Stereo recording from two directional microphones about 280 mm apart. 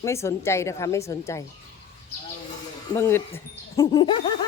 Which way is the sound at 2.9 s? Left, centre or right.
Centre.